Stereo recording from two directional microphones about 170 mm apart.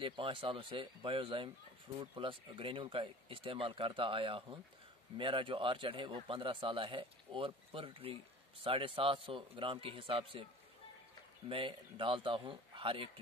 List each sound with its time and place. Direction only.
0.0 s speech: 30° right (ahead or behind)
11.4 s speech: 30° right (ahead or behind)